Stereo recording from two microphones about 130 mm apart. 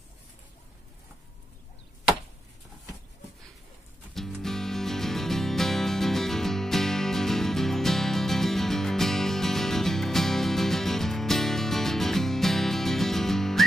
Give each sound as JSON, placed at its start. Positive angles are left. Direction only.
{"t": 4.1, "sound": "music", "side_deg": 0}